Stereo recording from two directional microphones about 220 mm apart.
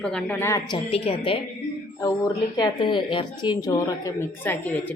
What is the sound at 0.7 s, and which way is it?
A woman's voice, 25° left (ahead or behind).